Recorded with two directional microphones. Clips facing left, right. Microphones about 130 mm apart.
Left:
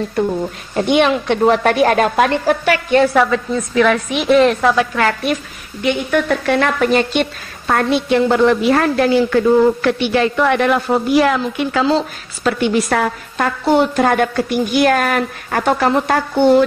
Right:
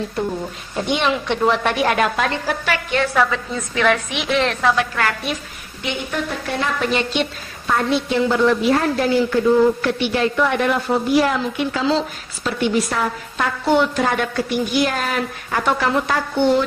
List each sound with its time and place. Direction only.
0.7 s a woman's voice: 60° left (ahead or behind); by 4.4 s 45° left (ahead or behind)
4.5 s a woman's voice: 20° left (ahead or behind)
5.8 s a woman's voice: 65° left (ahead or behind)
6.8 s a woman's voice: 45° left (ahead or behind); by 13.5 s 65° left (ahead or behind)
13.7 s a woman's voice: 40° left (ahead or behind); by 15.6 s 55° left (ahead or behind)
15.6 s a woman's voice: 45° left (ahead or behind)